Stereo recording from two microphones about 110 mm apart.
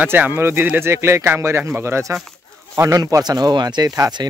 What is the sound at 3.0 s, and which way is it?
Speech, 35° right (ahead or behind).